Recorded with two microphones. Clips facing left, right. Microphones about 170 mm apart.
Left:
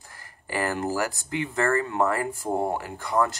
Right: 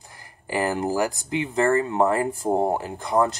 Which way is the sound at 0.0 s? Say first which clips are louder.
Right 3 dB; 20° right (ahead or behind).